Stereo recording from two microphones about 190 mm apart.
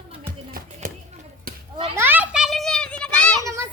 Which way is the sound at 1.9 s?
10° right (ahead or behind).